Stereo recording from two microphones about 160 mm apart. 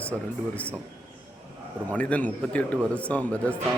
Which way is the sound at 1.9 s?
10° left (ahead or behind).